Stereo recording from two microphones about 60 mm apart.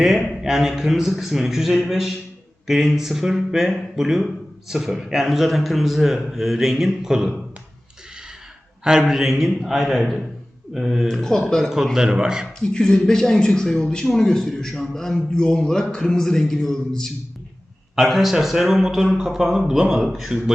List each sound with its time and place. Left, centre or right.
0.0 s a man's voice: centre
8.8 s a man's voice: centre
11.1 s speech: centre
11.9 s speech: centre
12.5 s speech: centre
17.9 s a man's voice: centre